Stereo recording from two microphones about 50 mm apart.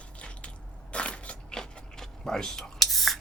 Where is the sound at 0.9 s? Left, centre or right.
Left.